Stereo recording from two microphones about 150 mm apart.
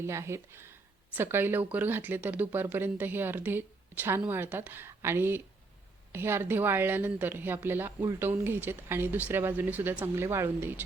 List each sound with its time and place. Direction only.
0.0 s speech: 20° right (ahead or behind)